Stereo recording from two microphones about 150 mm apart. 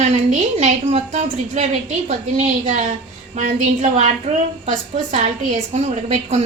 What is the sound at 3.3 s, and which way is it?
A woman's voice, 55° right (ahead or behind).